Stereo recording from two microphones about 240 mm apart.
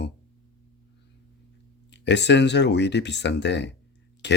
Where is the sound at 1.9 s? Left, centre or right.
Left.